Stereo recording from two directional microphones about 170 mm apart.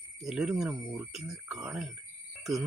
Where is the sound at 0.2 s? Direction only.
Centre (ahead or behind).